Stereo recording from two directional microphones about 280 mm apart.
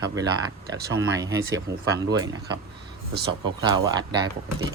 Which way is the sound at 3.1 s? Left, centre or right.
Right.